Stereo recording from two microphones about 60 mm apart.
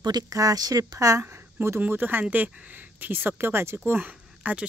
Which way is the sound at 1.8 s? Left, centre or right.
Right.